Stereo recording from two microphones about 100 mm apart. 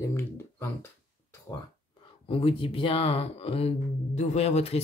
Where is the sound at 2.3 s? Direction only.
60° left (ahead or behind).